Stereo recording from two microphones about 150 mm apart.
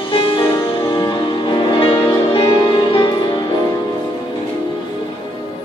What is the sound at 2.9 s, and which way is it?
Music, 30° left (ahead or behind).